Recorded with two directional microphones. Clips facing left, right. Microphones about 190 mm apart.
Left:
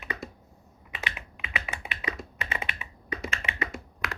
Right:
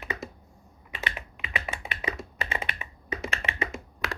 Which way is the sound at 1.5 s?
40° right (ahead or behind).